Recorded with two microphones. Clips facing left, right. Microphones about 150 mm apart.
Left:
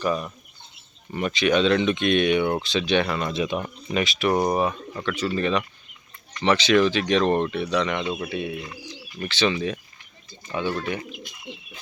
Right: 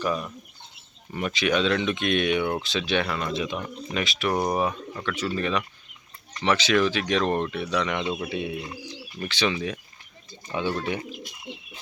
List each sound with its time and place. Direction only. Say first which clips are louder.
0.0 s speech: left 2 dB; centre (ahead or behind)
8.3 s speech: left 1 dB; 20° right (ahead or behind)
9.2 s speech: left 3 dB; 10° right (ahead or behind)
10.7 s speech: even; 20° right (ahead or behind)
11.1 s bird: even; 30° right (ahead or behind)